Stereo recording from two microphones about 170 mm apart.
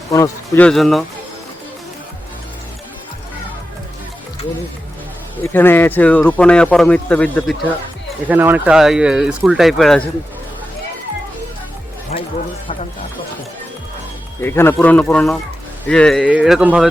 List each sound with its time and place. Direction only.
0.1 s speech: 15° left (ahead or behind)
0.6 s speech: centre (ahead or behind)
5.4 s speech: 10° left (ahead or behind)
8.3 s speech: 10° right (ahead or behind)
14.4 s speech: 15° left (ahead or behind); by 16.9 s 5° right (ahead or behind)